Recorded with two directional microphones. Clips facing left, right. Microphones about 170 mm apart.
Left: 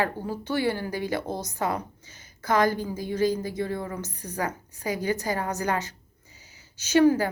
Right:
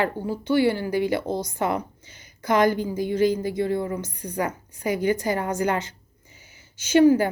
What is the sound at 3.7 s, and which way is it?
Speech, 30° right (ahead or behind).